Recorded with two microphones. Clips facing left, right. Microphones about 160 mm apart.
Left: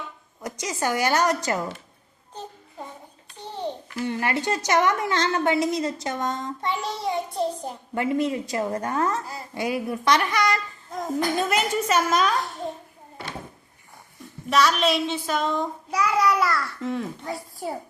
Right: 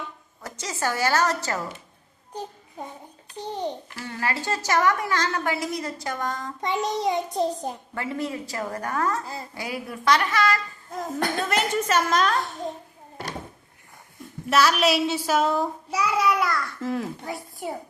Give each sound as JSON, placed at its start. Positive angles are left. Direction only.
{"t": 0.4, "sound": "a woman's voice", "side_deg": 15}
{"t": 3.5, "sound": "a child's voice", "side_deg": -15}
{"t": 3.9, "sound": "a woman's voice", "side_deg": 20}
{"t": 6.6, "sound": "a child's voice", "side_deg": -20}
{"t": 7.9, "sound": "a woman's voice", "side_deg": 20}
{"t": 11.4, "sound": "a woman's voice", "side_deg": 10}
{"t": 14.5, "sound": "child singing", "side_deg": -5}